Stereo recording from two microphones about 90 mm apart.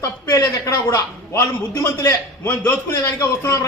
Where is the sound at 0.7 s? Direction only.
25° left (ahead or behind).